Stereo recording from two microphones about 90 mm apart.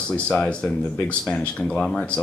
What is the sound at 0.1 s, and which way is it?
A woman's voice, 10° left (ahead or behind).